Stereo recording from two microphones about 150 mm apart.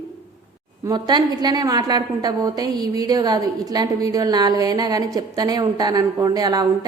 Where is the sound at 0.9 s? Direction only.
25° right (ahead or behind).